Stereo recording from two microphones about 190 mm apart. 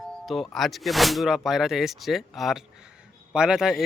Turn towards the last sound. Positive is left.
turn(degrees=-5)  # may be behind; listen again after turning